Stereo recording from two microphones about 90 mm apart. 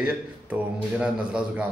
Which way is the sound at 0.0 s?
15° right (ahead or behind).